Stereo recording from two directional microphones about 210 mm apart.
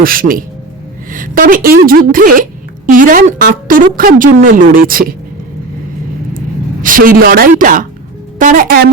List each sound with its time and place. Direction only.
0.0 s a woman's voice: 45° right (ahead or behind)
6.8 s a woman's voice: 40° right (ahead or behind)